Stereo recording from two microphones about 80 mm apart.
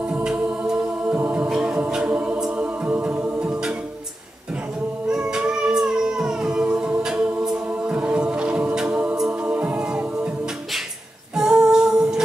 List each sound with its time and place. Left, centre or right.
0.1 s music: centre
1.1 s a capella: centre
1.5 s a capella: centre
2.6 s music: centre
5.0 s music: centre
11.3 s humming: centre